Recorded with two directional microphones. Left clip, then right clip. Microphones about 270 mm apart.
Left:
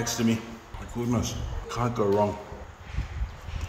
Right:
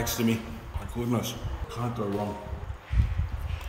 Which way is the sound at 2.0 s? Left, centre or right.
Centre.